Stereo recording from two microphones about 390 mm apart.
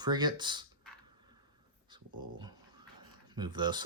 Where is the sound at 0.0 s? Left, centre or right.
Centre.